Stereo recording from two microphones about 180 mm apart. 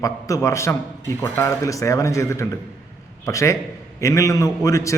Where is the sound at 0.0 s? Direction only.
20° left (ahead or behind).